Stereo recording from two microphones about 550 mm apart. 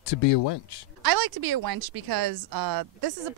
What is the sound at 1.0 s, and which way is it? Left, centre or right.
Speech, right.